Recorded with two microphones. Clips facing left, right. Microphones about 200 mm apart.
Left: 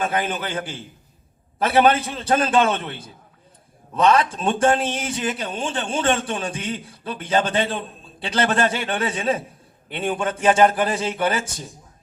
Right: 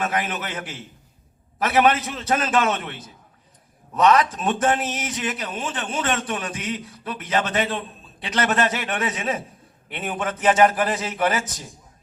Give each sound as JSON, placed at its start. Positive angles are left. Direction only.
{"t": 0.0, "sound": "a man's voice", "side_deg": 30}